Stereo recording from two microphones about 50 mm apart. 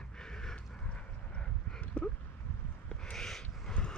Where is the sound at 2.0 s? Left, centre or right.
Left.